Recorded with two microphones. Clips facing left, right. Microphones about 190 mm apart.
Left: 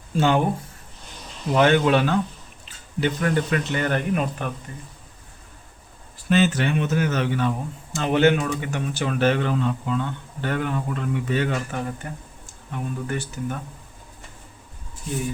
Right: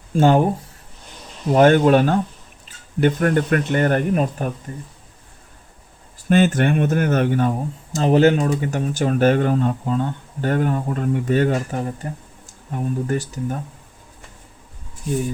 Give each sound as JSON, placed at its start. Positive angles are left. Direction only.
{"t": 0.1, "sound": "speech", "side_deg": -45}
{"t": 1.5, "sound": "speech", "side_deg": -45}
{"t": 6.2, "sound": "speech", "side_deg": -50}